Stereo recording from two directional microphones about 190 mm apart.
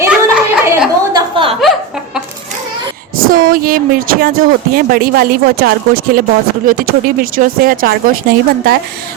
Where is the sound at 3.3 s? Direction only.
45° right (ahead or behind).